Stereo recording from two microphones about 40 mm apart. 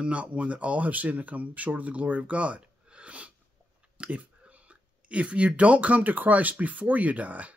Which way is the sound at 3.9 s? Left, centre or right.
Right.